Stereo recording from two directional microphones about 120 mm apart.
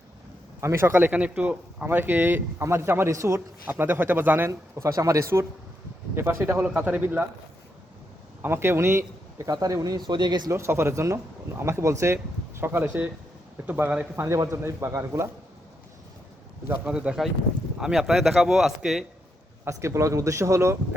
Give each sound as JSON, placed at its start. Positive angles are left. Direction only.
{"t": 0.6, "sound": "speech", "side_deg": -20}
{"t": 8.4, "sound": "speech", "side_deg": -20}
{"t": 10.5, "sound": "speech", "side_deg": -20}
{"t": 14.3, "sound": "speech", "side_deg": -25}
{"t": 16.6, "sound": "a man's voice", "side_deg": -10}
{"t": 19.6, "sound": "speech", "side_deg": -25}